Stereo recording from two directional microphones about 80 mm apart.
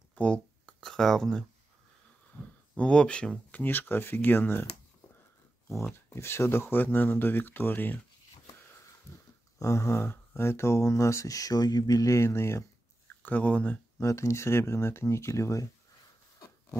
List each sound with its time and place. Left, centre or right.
0.1 s a sound: centre
0.7 s speech: centre
2.7 s speech: centre
3.6 s speech: left
6.0 s speech: left
9.6 s speech: left
13.2 s speech: centre
13.9 s speech: left